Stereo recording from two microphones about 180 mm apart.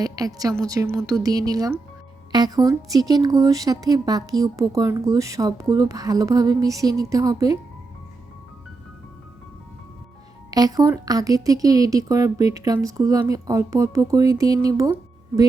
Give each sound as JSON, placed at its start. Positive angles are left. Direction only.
{"t": 0.0, "sound": "a woman's voice", "side_deg": -20}
{"t": 10.5, "sound": "a woman's voice", "side_deg": -20}